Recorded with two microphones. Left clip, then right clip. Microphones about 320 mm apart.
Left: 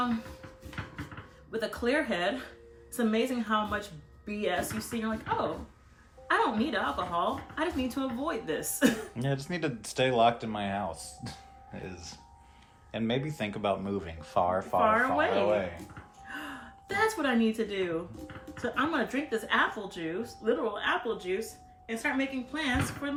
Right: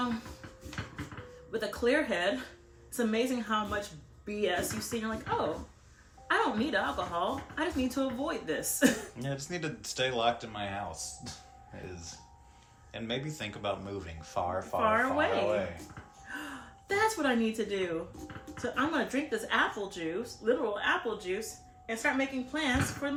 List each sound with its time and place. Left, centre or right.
1.5 s speech: centre
9.1 s speech: left
12.9 s speech: left
14.8 s speech: centre
16.3 s gasp: centre
16.9 s speech: centre